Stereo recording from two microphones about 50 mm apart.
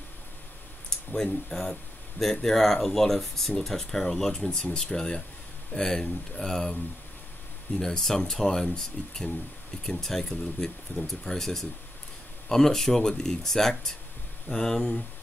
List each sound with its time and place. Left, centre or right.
1.1 s speech: centre
7.8 s speech: centre